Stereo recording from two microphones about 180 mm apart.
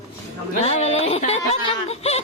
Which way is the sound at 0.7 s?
35° left (ahead or behind).